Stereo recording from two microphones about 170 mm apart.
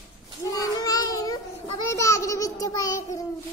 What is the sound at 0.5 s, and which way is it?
Child singing, 20° left (ahead or behind).